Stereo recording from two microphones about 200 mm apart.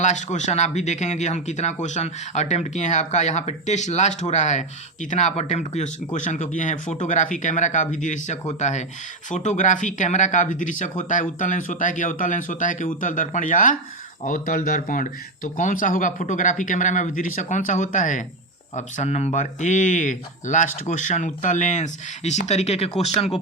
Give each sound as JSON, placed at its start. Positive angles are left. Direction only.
{"t": 0.0, "sound": "speech", "side_deg": 35}